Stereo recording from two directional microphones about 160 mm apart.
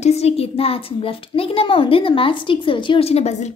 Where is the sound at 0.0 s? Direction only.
40° left (ahead or behind).